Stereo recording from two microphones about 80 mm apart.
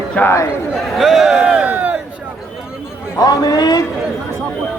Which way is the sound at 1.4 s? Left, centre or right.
Centre.